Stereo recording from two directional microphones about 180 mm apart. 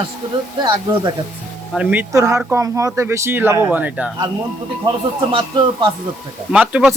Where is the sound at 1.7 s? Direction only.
10° right (ahead or behind).